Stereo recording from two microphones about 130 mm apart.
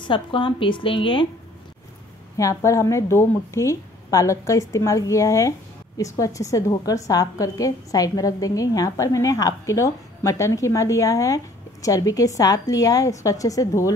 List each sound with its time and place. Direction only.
0.0 s a woman's voice: 40° left (ahead or behind)
2.3 s a woman's voice: 25° left (ahead or behind)